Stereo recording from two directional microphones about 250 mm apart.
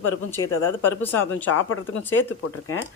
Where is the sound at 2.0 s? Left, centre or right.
Centre.